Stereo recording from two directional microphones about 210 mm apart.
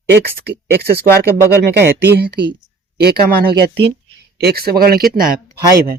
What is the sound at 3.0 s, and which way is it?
Speech, 50° right (ahead or behind).